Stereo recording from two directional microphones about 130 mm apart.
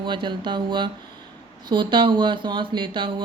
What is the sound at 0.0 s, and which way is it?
A woman's voice, 35° right (ahead or behind).